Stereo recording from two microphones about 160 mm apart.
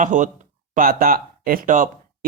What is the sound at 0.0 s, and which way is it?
Speech, 55° right (ahead or behind).